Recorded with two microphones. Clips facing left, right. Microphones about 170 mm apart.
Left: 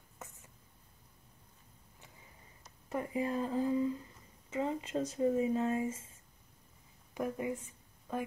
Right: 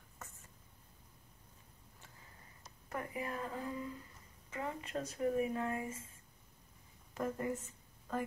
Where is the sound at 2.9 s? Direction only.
25° left (ahead or behind).